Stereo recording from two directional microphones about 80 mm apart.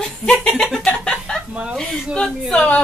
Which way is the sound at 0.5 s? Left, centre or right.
Centre.